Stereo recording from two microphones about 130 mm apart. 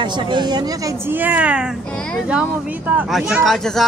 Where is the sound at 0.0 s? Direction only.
35° right (ahead or behind).